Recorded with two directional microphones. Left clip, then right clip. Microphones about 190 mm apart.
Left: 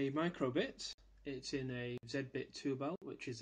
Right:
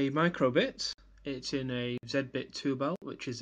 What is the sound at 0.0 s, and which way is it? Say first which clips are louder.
Speech: right 10 dB; 45° right (ahead or behind).